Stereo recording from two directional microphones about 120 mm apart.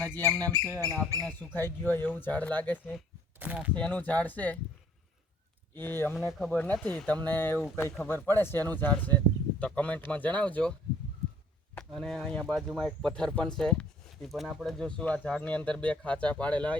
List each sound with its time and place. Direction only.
0.2 s speech: 30° right (ahead or behind)
1.5 s speech: 15° left (ahead or behind)
3.4 s speech: 10° right (ahead or behind)
3.8 s speech: 10° left (ahead or behind)
5.7 s speech: 20° left (ahead or behind)
11.9 s speech: 5° left (ahead or behind)